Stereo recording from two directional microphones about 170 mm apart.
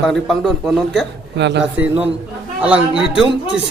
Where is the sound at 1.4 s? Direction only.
90° right.